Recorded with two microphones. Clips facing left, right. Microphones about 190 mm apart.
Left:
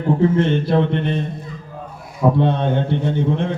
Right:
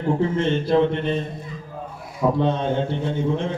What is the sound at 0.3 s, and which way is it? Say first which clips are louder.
Speech: left 2 dB; 60° left (ahead or behind).